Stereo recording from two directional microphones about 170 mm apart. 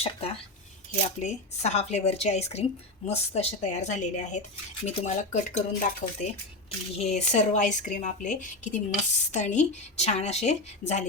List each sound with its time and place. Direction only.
0.0 s a woman's voice: 35° left (ahead or behind)